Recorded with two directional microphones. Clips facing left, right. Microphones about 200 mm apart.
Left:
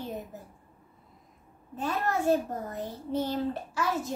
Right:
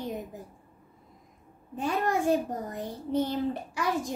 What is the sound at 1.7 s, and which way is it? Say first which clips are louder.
A child's voice: right 2 dB; 15° right (ahead or behind).